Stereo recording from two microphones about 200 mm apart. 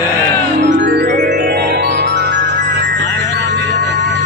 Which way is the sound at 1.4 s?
55° right (ahead or behind).